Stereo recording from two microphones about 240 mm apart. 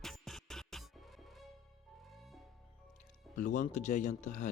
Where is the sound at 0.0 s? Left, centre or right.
Centre.